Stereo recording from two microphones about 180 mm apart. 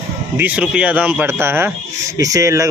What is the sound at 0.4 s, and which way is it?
A man's voice, 5° right (ahead or behind).